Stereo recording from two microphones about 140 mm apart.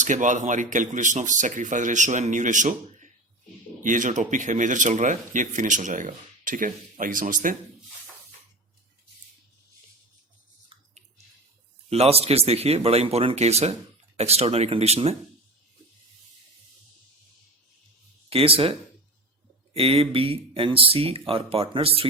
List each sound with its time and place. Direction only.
0.0 s speech: 65° right (ahead or behind)
10.7 s a sound: 40° right (ahead or behind)
11.9 s speech: 45° right (ahead or behind)
18.3 s speech: 40° right (ahead or behind)